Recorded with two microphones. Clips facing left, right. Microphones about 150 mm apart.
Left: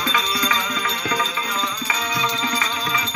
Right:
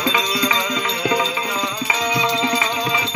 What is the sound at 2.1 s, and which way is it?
Music, 20° right (ahead or behind).